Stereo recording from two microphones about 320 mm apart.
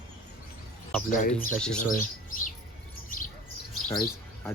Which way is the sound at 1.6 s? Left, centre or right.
Centre.